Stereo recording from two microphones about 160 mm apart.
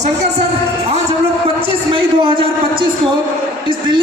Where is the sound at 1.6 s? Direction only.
35° right (ahead or behind).